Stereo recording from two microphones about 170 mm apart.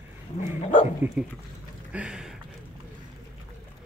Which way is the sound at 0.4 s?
45° left (ahead or behind).